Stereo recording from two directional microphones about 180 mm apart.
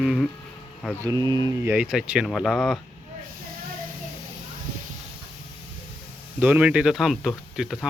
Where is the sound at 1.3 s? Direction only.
20° right (ahead or behind).